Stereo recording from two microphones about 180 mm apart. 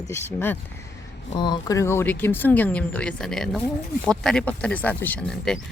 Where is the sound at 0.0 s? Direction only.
15° left (ahead or behind).